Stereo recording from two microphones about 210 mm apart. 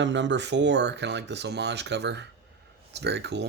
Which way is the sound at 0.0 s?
60° right (ahead or behind).